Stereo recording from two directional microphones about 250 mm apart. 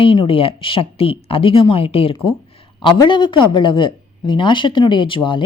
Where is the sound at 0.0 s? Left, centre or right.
Left.